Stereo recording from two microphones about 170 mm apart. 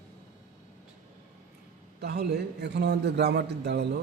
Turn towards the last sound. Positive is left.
turn(degrees=-75)  # may be behind; listen again after turning